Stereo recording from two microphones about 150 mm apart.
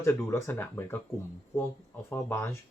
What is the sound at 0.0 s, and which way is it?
Speech, 15° left (ahead or behind).